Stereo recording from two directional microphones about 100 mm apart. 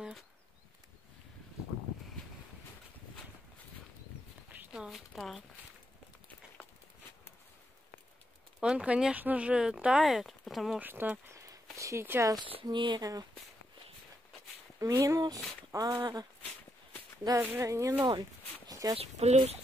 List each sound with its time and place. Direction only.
4.5 s speech: 5° right (ahead or behind)
8.5 s speech: 10° right (ahead or behind)
10.8 s speech: 20° right (ahead or behind)
11.3 s a sound: 35° right (ahead or behind)
11.7 s speech: 30° right (ahead or behind)
12.6 s speech: 50° right (ahead or behind)
13.0 s speech: 35° right (ahead or behind)
14.8 s speech: 35° right (ahead or behind)
17.4 s speech: 25° right (ahead or behind)
18.7 s a sound: 35° right (ahead or behind)
18.9 s speech: 85° right